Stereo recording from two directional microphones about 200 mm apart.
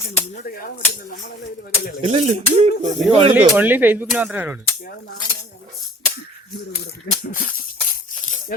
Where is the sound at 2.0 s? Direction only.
35° right (ahead or behind).